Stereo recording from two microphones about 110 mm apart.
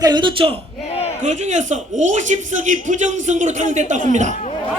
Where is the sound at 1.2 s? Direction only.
90° right.